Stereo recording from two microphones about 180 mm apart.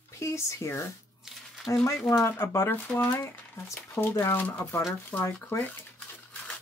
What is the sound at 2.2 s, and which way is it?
Speech, 15° left (ahead or behind).